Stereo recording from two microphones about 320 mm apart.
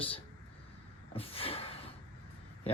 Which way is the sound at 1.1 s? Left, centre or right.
Centre.